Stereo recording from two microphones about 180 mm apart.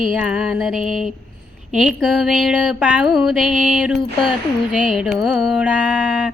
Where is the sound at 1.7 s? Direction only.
5° right (ahead or behind).